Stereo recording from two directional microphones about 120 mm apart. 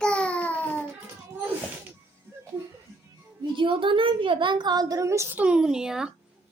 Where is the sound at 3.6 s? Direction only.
45° right (ahead or behind); by 5.4 s 25° right (ahead or behind).